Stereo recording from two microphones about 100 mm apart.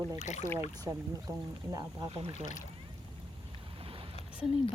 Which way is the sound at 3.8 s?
65° right (ahead or behind).